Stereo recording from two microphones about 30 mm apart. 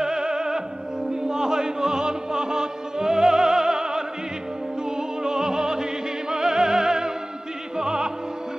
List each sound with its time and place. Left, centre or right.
0.0 s opera: right
1.3 s music: right
7.7 s opera: right